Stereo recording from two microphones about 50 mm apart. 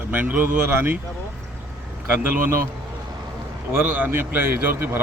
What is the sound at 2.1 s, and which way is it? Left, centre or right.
Speech, right.